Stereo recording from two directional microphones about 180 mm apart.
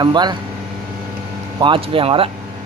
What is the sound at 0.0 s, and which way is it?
Speech, 25° right (ahead or behind).